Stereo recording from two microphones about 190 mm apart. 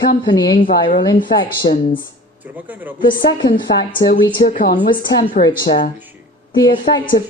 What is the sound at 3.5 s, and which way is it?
A woman's voice, 55° left (ahead or behind).